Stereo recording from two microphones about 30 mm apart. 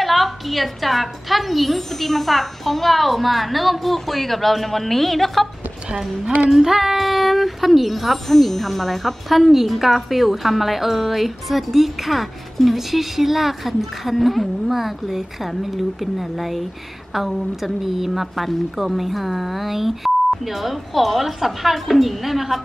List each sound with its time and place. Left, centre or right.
0.0 s a woman's voice: centre
6.5 s a woman's voice: centre